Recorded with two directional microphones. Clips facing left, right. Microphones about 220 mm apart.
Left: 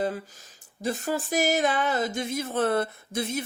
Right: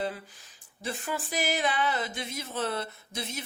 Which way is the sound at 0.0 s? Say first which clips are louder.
Left 5 dB; 45° left (ahead or behind).